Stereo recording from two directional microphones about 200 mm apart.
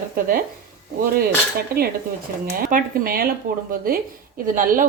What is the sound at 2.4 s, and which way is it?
Speech, 45° right (ahead or behind).